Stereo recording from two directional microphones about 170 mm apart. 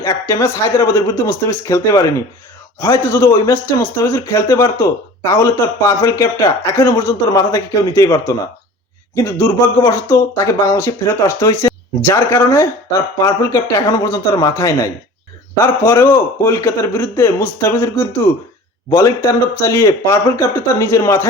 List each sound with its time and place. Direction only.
0.0 s speech: 15° left (ahead or behind)